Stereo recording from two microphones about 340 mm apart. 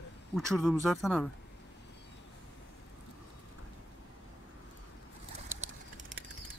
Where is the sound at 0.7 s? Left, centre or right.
Centre.